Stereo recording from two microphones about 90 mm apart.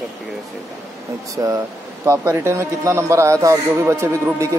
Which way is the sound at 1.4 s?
40° right (ahead or behind).